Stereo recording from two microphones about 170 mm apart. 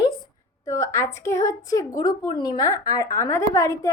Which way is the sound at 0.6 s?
20° left (ahead or behind).